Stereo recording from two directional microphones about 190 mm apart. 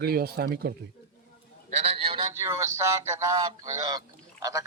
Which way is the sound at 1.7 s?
35° right (ahead or behind).